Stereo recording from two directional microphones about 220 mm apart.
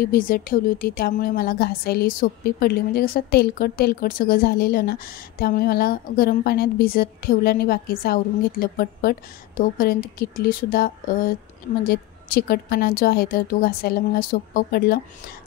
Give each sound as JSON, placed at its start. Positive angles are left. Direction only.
{"t": 0.0, "sound": "a woman's voice", "side_deg": 40}